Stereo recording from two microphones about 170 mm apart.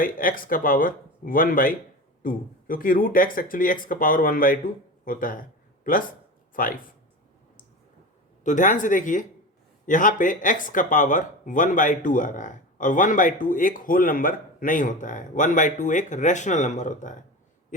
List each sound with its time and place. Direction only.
0.0 s speech: 55° left (ahead or behind)
8.4 s speech: 50° left (ahead or behind)